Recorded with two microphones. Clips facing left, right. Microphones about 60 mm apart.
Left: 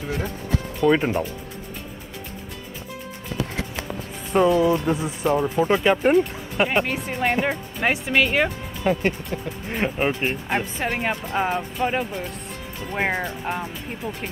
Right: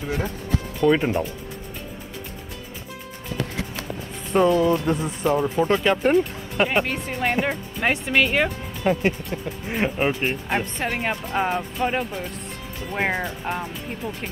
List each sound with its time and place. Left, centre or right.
0.7 s speech: centre
4.3 s speech: centre